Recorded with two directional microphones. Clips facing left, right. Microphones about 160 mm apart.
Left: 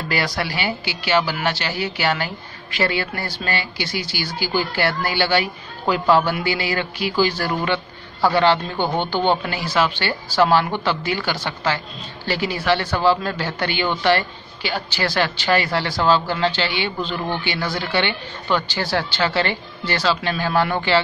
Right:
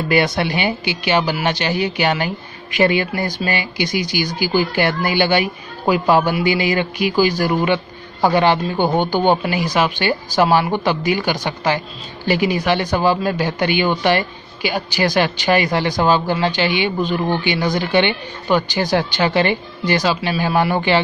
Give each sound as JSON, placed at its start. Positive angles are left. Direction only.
{"t": 0.1, "sound": "speech", "side_deg": -20}